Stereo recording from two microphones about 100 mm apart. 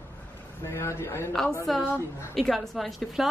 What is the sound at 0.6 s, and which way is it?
Speech, 30° left (ahead or behind).